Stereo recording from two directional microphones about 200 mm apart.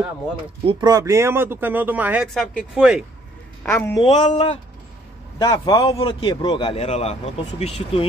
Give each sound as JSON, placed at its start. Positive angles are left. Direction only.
{"t": 0.7, "sound": "speech", "side_deg": -20}
{"t": 3.6, "sound": "a woman's voice", "side_deg": 10}
{"t": 4.0, "sound": "a man's voice", "side_deg": 35}